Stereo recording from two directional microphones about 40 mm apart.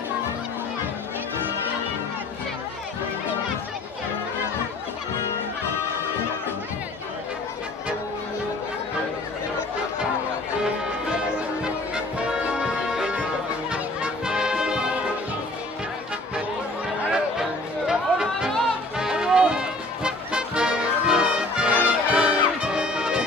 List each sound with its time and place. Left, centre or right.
14.2 s brass instrument: centre
17.1 s music: centre
21.6 s brass instrument: right